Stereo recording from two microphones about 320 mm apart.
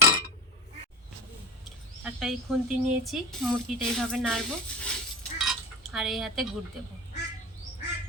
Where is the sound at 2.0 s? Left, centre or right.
Centre.